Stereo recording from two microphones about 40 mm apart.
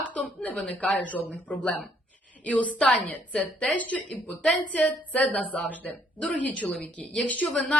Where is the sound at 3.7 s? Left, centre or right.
Left.